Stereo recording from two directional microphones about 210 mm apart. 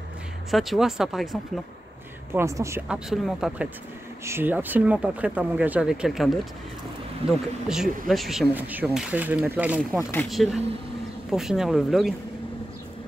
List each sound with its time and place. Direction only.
0.5 s speech: centre (ahead or behind)
2.3 s speech: 15° right (ahead or behind)
3.1 s speech: centre (ahead or behind)
7.2 s speech: 30° right (ahead or behind)
7.6 s speech: centre (ahead or behind)